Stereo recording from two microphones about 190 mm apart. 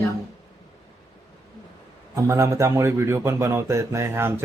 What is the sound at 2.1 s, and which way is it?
A man's voice, 15° right (ahead or behind).